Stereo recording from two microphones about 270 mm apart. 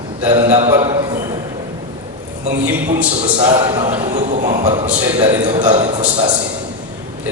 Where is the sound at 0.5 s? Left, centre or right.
Right.